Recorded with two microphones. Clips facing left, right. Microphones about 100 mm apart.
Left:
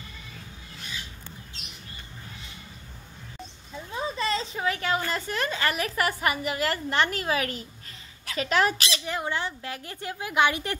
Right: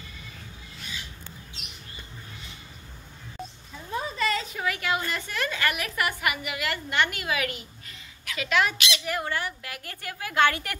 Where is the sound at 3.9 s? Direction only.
25° left (ahead or behind).